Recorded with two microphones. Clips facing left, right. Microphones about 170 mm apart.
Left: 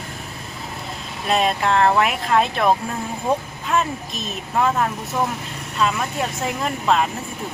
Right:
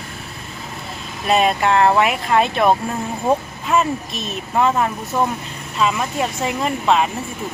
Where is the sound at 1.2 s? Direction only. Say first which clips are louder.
Right 3 dB; 5° right (ahead or behind).